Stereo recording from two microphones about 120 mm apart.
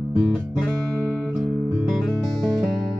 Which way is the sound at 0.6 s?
5° left (ahead or behind).